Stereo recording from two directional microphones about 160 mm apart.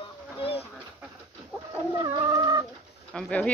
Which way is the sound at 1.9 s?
25° right (ahead or behind).